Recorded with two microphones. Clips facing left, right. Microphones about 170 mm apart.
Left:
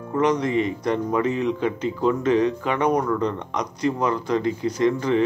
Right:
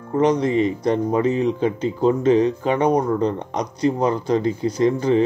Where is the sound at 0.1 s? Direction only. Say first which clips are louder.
Right 3 dB; 30° right (ahead or behind).